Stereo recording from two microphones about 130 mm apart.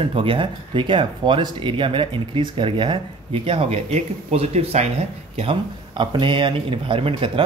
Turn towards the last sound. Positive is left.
turn(degrees=-45)  # may be behind; listen again after turning